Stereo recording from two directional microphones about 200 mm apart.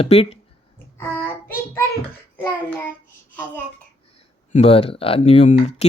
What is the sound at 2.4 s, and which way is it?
Child singing, 10° left (ahead or behind).